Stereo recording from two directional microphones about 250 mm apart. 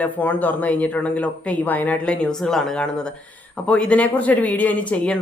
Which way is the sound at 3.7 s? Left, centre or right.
Centre.